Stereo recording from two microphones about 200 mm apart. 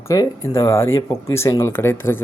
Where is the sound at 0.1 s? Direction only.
15° left (ahead or behind).